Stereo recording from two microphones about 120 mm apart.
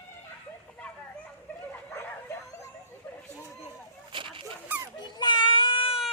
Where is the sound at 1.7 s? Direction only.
20° left (ahead or behind).